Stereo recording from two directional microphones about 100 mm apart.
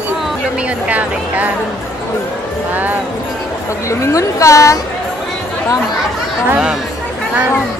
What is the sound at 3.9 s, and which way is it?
Speech, 30° left (ahead or behind).